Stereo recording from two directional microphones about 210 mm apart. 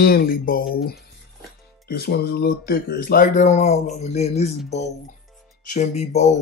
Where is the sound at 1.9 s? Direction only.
45° left (ahead or behind); by 4.5 s 30° left (ahead or behind).